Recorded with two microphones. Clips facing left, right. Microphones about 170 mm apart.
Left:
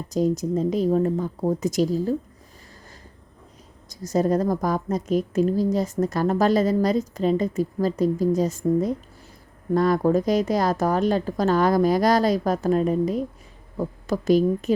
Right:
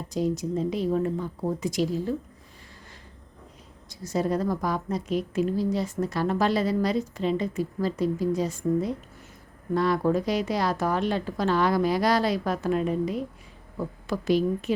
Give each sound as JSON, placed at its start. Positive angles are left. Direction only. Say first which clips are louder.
{"t": 0.1, "sound": "a woman's voice", "louder": "left 5 dB", "side_deg": 45}
{"t": 3.8, "sound": "a woman's voice", "louder": "left 5 dB", "side_deg": 40}